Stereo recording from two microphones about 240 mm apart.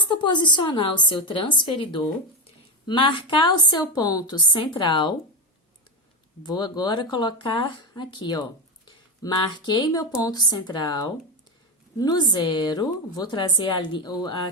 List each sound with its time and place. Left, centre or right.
0.0 s a woman's voice: centre
6.4 s a woman's voice: centre